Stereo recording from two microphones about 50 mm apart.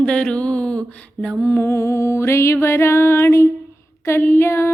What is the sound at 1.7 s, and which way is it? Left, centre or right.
Music, left.